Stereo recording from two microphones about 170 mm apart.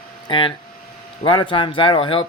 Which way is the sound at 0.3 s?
30° left (ahead or behind).